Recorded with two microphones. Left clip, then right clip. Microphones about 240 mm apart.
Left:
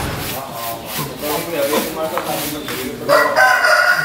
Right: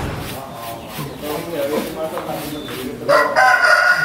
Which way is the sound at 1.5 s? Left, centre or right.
Centre.